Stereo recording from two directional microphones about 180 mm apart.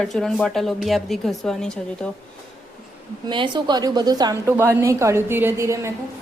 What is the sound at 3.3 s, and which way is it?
A woman's voice, 25° right (ahead or behind).